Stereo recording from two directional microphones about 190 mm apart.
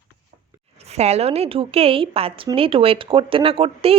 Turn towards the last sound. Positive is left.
turn(degrees=-30)  # may be behind; listen again after turning